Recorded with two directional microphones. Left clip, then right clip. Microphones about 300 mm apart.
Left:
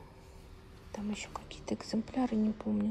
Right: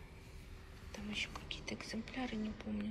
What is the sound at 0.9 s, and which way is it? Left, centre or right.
A woman's voice, centre.